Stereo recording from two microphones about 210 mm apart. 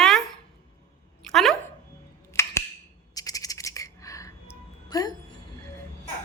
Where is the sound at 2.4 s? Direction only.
10° left (ahead or behind).